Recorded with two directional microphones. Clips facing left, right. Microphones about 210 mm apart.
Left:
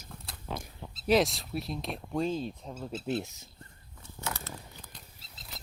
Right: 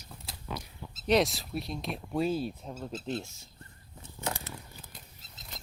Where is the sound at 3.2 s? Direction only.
15° left (ahead or behind).